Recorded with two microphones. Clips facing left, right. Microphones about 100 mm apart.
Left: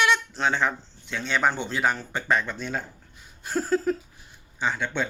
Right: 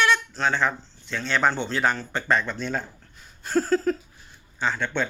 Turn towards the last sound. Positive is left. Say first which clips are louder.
# right 1 dB
turn(degrees=10)  # may be behind; listen again after turning